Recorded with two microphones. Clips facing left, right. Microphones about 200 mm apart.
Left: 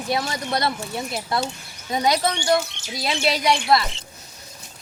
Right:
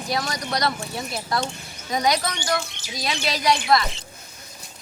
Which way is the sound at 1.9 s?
25° left (ahead or behind).